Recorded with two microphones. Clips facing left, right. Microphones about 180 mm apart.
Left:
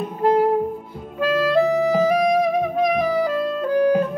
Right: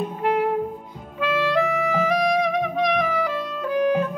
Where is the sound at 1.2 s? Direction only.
35° left (ahead or behind).